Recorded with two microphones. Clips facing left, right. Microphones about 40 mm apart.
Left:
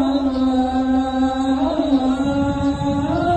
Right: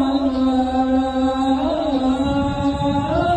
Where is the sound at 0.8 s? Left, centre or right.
Right.